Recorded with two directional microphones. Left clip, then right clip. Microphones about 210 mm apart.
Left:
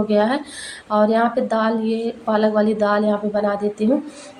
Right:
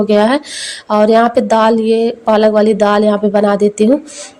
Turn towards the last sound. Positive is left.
turn(degrees=-40)  # may be behind; listen again after turning